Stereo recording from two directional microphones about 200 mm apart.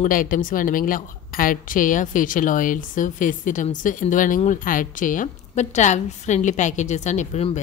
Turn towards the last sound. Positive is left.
turn(degrees=35)  # may be behind; listen again after turning